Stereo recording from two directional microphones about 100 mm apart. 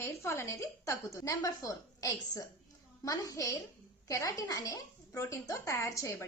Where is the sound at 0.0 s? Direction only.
30° left (ahead or behind).